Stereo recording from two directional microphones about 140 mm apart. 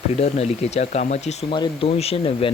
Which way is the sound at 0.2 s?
50° left (ahead or behind).